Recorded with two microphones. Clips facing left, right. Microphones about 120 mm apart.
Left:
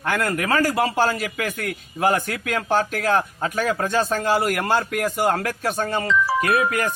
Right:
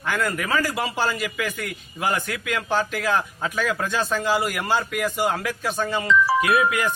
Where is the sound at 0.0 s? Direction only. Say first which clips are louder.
Left 2 dB; 55° left (ahead or behind).